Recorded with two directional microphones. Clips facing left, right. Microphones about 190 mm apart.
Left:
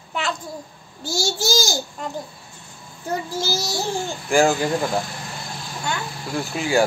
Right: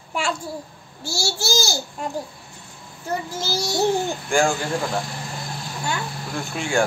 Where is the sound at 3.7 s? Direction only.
20° right (ahead or behind).